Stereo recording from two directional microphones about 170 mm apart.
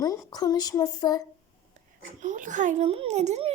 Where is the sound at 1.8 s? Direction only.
45° right (ahead or behind).